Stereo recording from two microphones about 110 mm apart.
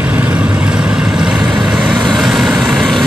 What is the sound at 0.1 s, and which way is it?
Vehicle, 15° right (ahead or behind).